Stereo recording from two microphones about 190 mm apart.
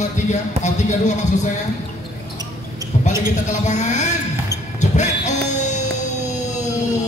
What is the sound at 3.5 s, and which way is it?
Speech, 40° left (ahead or behind).